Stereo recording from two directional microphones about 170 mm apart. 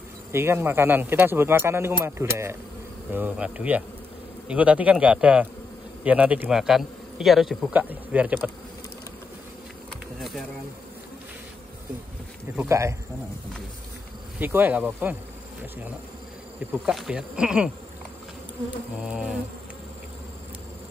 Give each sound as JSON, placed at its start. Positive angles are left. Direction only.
{"t": 0.3, "sound": "a man's voice", "side_deg": -15}
{"t": 12.5, "sound": "a man's voice", "side_deg": -15}
{"t": 14.4, "sound": "a man's voice", "side_deg": -10}
{"t": 16.9, "sound": "speech", "side_deg": -5}
{"t": 18.9, "sound": "a man's voice", "side_deg": -5}